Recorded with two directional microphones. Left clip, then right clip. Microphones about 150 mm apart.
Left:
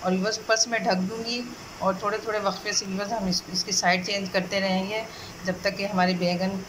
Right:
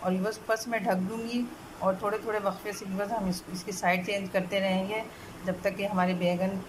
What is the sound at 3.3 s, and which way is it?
Speech, 35° right (ahead or behind).